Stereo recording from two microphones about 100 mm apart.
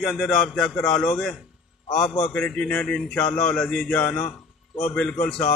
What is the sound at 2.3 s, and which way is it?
A man's voice, 10° left (ahead or behind).